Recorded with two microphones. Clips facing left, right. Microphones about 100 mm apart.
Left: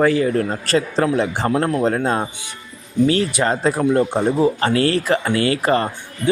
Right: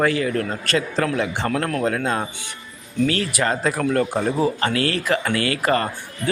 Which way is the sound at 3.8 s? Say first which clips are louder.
Left 4 dB; 20° left (ahead or behind).